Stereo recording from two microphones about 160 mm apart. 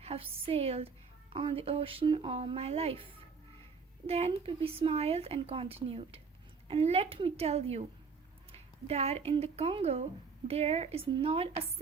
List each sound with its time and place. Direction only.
0.0 s speech: 35° right (ahead or behind)